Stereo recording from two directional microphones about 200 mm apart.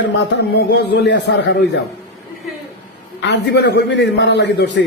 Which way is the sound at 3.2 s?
60° left (ahead or behind).